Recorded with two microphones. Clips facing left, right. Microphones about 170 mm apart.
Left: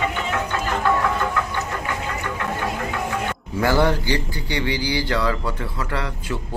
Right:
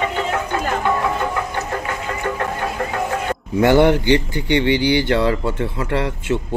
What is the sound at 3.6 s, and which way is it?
Speech, 25° right (ahead or behind).